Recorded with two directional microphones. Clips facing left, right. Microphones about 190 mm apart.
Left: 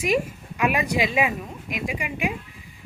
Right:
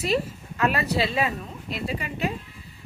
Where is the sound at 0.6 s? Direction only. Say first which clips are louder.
Left 1 dB; 15° left (ahead or behind).